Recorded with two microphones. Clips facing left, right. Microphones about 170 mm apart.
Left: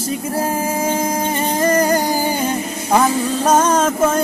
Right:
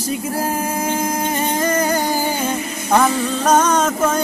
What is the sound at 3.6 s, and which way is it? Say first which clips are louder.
Music: left 1 dB; 30° left (ahead or behind).